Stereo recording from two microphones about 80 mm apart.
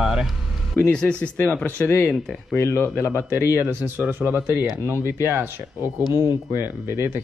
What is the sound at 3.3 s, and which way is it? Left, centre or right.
Speech, right.